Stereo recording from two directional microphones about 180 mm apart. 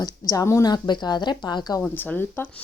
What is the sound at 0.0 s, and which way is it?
A woman's voice, 20° left (ahead or behind).